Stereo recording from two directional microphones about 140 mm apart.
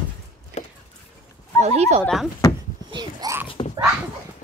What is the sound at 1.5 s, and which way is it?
Speech, 50° right (ahead or behind).